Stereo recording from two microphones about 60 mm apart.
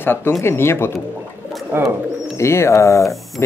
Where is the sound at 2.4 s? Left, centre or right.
Left.